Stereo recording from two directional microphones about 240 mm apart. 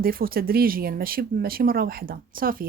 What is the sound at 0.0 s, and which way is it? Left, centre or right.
Speech, right.